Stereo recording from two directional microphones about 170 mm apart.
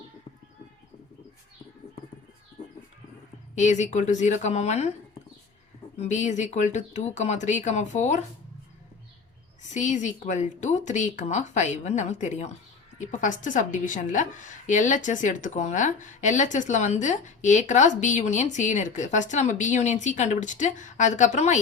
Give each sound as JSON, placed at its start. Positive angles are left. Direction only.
{"t": 3.5, "sound": "a woman's voice", "side_deg": 45}
{"t": 6.0, "sound": "a woman's voice", "side_deg": 45}
{"t": 9.6, "sound": "a woman's voice", "side_deg": 45}